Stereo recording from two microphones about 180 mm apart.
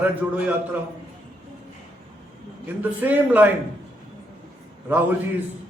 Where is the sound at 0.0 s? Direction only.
10° right (ahead or behind).